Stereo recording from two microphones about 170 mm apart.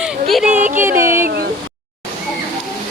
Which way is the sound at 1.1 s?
60° right (ahead or behind).